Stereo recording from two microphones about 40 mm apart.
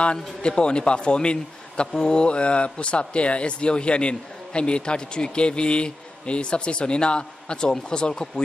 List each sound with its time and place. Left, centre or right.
0.0 s a man's voice: left